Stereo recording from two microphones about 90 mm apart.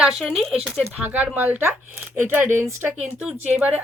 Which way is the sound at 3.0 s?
10° right (ahead or behind).